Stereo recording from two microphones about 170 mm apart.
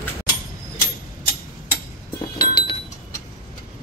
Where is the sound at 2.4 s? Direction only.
25° left (ahead or behind).